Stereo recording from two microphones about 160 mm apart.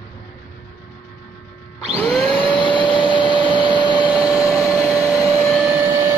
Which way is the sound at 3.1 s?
30° left (ahead or behind).